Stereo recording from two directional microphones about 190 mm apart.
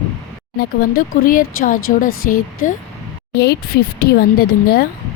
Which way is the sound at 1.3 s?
45° left (ahead or behind).